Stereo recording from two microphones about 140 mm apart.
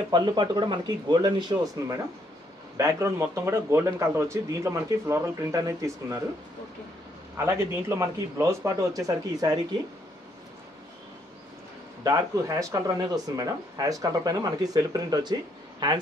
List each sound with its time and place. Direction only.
0.1 s speech: 30° right (ahead or behind)
7.3 s speech: 20° right (ahead or behind)
12.0 s speech: 25° right (ahead or behind)